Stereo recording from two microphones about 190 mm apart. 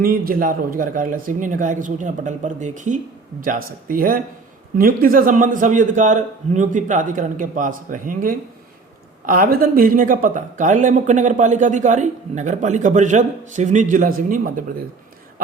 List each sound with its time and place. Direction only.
0.0 s a man's voice: 50° right (ahead or behind)